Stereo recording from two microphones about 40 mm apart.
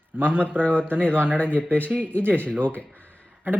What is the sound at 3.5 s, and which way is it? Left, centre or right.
Speech, right.